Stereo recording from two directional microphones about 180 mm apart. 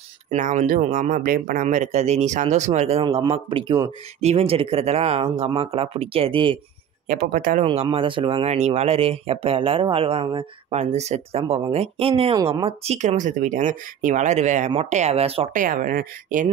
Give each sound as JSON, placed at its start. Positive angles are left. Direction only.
{"t": 0.3, "sound": "speech", "side_deg": -45}
{"t": 7.1, "sound": "speech", "side_deg": -50}
{"t": 7.6, "sound": "speech", "side_deg": -30}
{"t": 15.6, "sound": "speech", "side_deg": -50}